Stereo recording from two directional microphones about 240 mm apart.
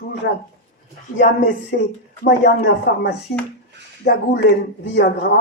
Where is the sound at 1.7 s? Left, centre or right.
Left.